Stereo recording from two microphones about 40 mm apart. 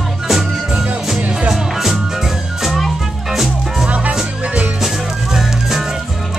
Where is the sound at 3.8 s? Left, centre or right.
Right.